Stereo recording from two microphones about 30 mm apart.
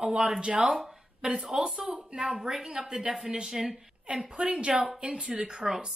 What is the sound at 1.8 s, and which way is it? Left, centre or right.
A woman's voice, right.